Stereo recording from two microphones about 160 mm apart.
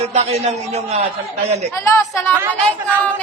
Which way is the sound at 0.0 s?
40° right (ahead or behind).